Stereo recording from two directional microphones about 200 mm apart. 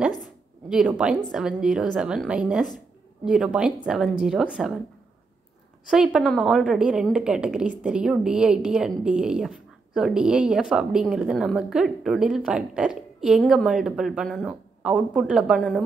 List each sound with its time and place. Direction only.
0.7 s a woman's voice: 5° right (ahead or behind)
5.9 s a woman's voice: 5° right (ahead or behind)